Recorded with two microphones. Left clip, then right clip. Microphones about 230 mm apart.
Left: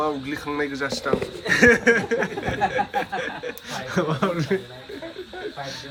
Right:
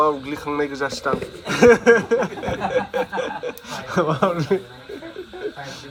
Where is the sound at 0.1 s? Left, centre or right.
Centre.